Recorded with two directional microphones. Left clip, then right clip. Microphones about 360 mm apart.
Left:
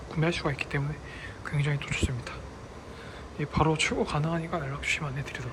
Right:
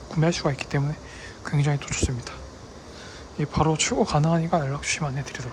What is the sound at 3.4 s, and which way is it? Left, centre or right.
Speech, centre.